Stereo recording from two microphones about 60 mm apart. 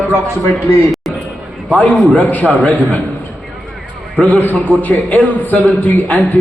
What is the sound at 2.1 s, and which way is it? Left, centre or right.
Speech, left.